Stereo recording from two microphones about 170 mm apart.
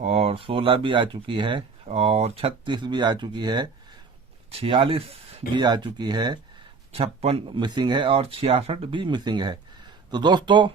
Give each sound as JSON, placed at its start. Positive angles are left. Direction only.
{"t": 0.0, "sound": "speech", "side_deg": -35}
{"t": 6.9, "sound": "speech", "side_deg": -35}